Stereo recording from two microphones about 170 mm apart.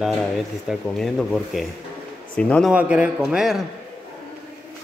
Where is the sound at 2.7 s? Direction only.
5° right (ahead or behind).